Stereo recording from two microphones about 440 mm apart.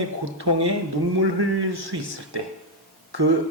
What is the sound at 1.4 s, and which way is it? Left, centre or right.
A man's voice, right.